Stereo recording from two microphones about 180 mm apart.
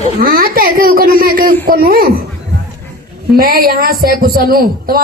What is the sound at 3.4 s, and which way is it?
A man's voice, 55° right (ahead or behind).